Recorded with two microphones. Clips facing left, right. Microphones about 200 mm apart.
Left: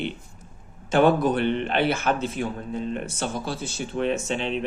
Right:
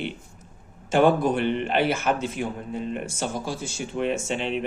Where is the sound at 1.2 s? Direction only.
10° right (ahead or behind).